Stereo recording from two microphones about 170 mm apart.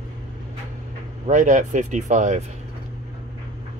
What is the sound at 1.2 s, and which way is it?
Speech, 45° right (ahead or behind).